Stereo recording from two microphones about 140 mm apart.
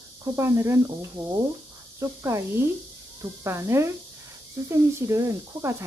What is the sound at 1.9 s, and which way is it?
Speech, 20° right (ahead or behind).